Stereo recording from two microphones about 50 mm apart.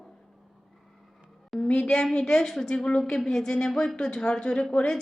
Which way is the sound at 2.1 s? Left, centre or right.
Centre.